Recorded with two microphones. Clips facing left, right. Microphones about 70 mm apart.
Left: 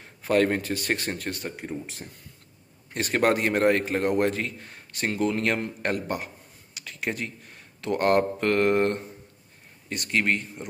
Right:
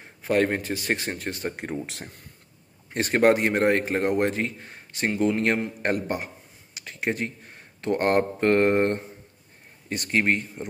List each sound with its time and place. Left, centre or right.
0.2 s speech: centre
1.6 s speech: right
2.9 s a man's voice: right